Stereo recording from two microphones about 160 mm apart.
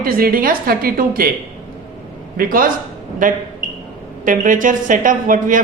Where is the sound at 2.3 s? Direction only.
60° right (ahead or behind).